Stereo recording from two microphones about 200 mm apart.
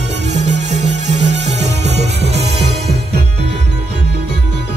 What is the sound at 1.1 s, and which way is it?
Music, 35° right (ahead or behind).